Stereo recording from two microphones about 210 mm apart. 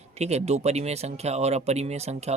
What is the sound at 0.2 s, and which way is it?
Speech, 30° right (ahead or behind).